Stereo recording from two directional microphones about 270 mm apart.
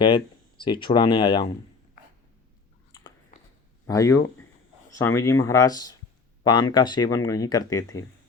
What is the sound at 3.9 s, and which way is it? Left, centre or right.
Speech, centre.